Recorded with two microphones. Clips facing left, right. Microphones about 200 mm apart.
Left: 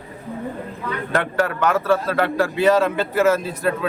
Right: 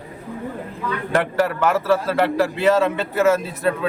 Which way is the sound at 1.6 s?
5° right (ahead or behind).